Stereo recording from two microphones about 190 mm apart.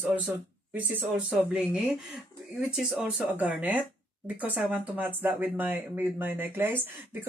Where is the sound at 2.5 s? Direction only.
5° right (ahead or behind).